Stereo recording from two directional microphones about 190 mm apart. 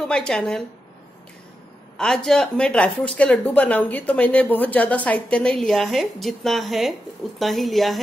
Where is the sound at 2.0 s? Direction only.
5° left (ahead or behind).